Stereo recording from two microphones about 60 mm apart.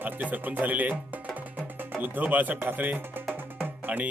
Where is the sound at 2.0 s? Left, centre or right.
Right.